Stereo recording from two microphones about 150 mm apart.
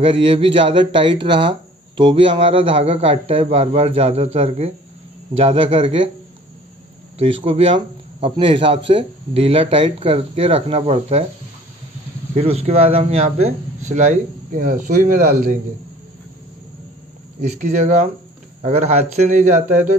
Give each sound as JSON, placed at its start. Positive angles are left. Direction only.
{"t": 0.0, "sound": "speech", "side_deg": -35}
{"t": 7.2, "sound": "speech", "side_deg": -35}
{"t": 12.4, "sound": "speech", "side_deg": -45}
{"t": 17.4, "sound": "speech", "side_deg": -55}